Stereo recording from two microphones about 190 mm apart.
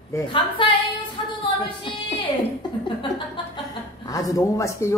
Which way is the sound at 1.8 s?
25° left (ahead or behind).